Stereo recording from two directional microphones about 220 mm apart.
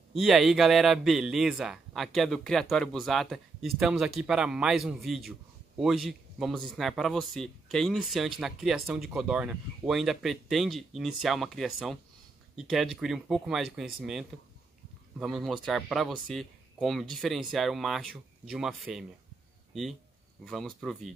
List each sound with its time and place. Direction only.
0.1 s speech: centre (ahead or behind)